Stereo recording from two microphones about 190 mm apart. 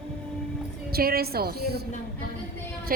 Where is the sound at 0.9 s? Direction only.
55° right (ahead or behind).